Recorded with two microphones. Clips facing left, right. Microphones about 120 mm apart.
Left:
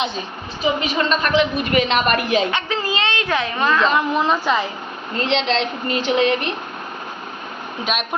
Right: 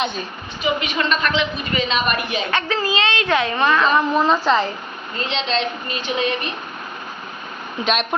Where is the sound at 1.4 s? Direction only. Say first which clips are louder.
Left 5 dB; 65° left (ahead or behind); by 2.4 s 90° left.